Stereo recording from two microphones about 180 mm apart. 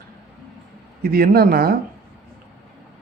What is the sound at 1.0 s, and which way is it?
Speech, 55° right (ahead or behind).